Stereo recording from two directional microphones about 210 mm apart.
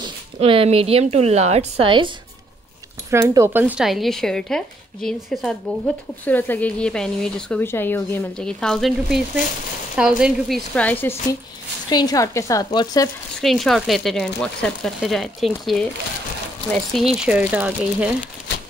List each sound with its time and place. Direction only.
0.0 s a woman's voice: 25° right (ahead or behind); by 11.1 s 10° left (ahead or behind)
11.9 s a woman's voice: 20° left (ahead or behind)
13.4 s speech: centre (ahead or behind)
16.7 s speech: centre (ahead or behind)